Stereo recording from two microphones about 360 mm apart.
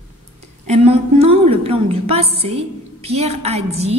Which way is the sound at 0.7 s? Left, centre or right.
Centre.